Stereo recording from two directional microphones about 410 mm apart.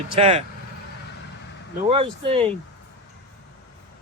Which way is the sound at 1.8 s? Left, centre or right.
Centre.